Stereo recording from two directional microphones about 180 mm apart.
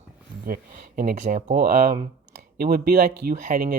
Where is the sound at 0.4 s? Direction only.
50° right (ahead or behind).